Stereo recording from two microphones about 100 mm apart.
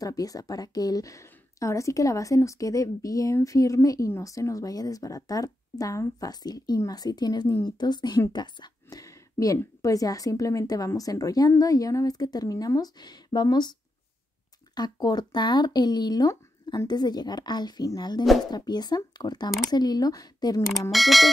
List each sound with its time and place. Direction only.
0.0 s a woman's voice: 35° left (ahead or behind)
9.0 s a sound: 35° left (ahead or behind)
9.6 s a woman's voice: 35° left (ahead or behind)
14.8 s a woman's voice: 45° left (ahead or behind)
20.9 s music: centre (ahead or behind)